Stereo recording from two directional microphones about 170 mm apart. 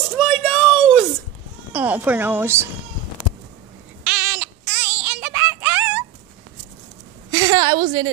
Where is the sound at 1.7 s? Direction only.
10° right (ahead or behind).